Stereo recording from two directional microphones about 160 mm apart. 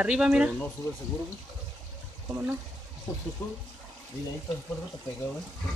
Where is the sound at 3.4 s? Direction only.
20° left (ahead or behind).